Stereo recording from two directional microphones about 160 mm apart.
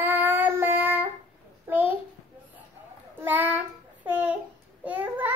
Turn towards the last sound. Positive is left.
turn(degrees=-10)  # may be behind; listen again after turning